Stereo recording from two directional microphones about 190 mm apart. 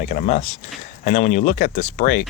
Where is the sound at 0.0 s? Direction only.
45° left (ahead or behind).